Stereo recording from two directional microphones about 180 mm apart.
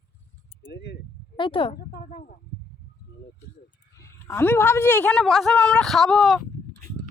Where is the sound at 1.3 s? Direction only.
30° left (ahead or behind).